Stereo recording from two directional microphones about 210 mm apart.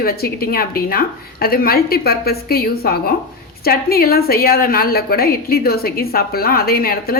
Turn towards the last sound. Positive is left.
turn(degrees=45)  # may be behind; listen again after turning